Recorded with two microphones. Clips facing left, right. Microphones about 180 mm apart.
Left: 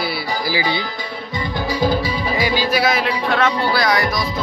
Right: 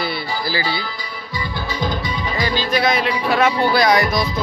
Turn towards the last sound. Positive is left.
turn(degrees=-25)  # may be behind; listen again after turning